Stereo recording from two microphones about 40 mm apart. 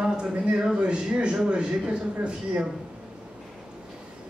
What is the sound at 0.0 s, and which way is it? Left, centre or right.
Speech, right.